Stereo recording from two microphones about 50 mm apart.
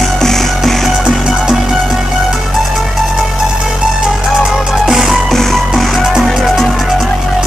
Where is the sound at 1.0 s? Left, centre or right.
Centre.